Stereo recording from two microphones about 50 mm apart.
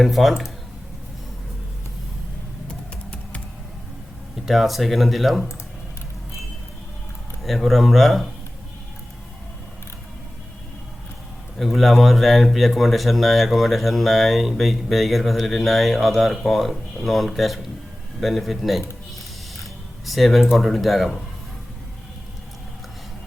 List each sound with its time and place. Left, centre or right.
0.0 s speech: centre
2.6 s typing: left
4.4 s speech: centre
7.4 s speech: centre
11.5 s speech: centre